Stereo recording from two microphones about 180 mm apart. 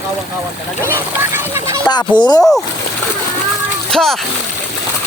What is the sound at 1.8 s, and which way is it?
Speech, 25° left (ahead or behind).